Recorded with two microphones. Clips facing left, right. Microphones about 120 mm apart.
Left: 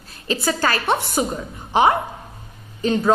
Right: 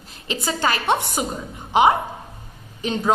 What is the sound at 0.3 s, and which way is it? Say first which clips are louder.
A woman's voice: left 2 dB; 20° right (ahead or behind).